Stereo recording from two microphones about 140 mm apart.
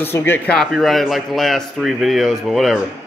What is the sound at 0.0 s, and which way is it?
Speech, 15° left (ahead or behind).